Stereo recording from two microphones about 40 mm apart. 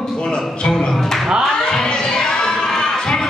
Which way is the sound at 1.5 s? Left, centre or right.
Centre.